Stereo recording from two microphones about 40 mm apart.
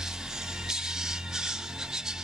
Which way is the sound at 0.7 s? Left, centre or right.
Centre.